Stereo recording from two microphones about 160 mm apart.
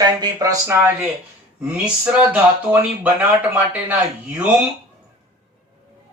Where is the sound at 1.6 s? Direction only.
5° right (ahead or behind).